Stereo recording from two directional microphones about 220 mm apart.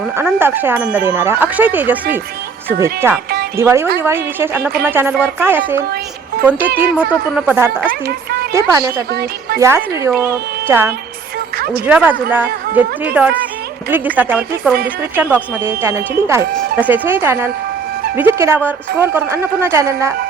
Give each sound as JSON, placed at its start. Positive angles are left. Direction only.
{"t": 0.2, "sound": "speech", "side_deg": -10}
{"t": 6.9, "sound": "speech", "side_deg": 5}
{"t": 7.4, "sound": "speech", "side_deg": -10}
{"t": 11.5, "sound": "a sound", "side_deg": -45}
{"t": 11.9, "sound": "speech", "side_deg": -5}